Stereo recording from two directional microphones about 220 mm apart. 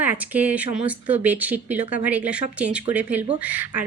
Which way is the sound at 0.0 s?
5° right (ahead or behind).